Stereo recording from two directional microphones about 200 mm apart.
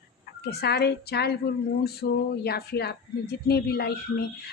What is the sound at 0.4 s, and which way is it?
Speech, 55° left (ahead or behind).